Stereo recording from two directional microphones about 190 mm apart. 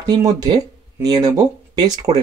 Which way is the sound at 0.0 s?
20° right (ahead or behind).